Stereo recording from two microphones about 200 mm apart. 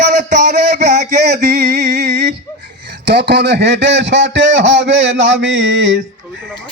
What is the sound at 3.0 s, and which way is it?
A man's voice, 55° right (ahead or behind).